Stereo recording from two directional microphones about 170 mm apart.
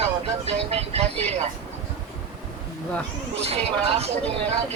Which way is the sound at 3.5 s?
35° right (ahead or behind).